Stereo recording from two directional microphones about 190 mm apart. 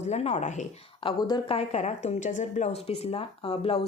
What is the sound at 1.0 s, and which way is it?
A woman's voice, 25° left (ahead or behind).